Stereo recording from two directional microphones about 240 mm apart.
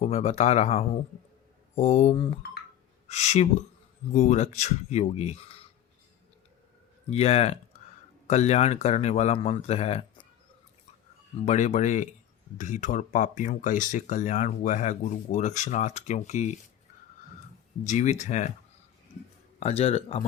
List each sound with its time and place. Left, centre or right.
0.0 s speech: left
7.1 s speech: left
11.4 s speech: left
17.8 s speech: left
19.5 s speech: left